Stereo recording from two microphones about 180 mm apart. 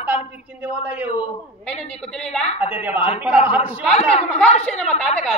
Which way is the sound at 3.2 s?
10° right (ahead or behind).